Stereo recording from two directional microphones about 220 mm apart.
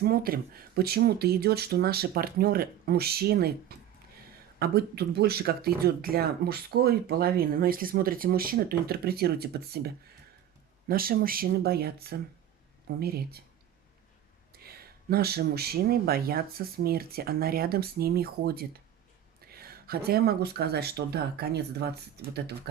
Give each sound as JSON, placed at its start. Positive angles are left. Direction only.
{"t": 0.0, "sound": "speech", "side_deg": -45}
{"t": 14.5, "sound": "speech", "side_deg": -45}